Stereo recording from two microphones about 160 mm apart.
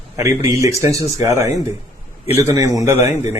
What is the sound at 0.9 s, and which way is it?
A woman's voice, 20° right (ahead or behind).